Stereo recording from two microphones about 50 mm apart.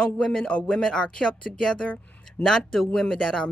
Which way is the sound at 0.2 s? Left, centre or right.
Centre.